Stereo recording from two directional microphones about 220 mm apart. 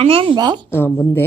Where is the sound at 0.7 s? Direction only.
10° left (ahead or behind).